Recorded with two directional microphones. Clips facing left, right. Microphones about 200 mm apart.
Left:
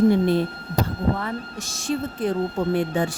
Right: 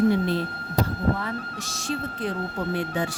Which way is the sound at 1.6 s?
50° left (ahead or behind).